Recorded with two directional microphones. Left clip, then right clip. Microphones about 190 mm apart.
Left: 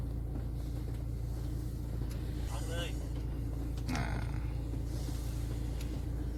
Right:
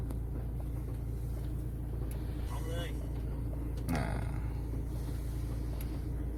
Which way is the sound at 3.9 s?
25° right (ahead or behind).